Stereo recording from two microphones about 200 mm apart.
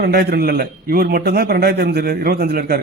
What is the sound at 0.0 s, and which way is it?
A man's voice, 50° right (ahead or behind).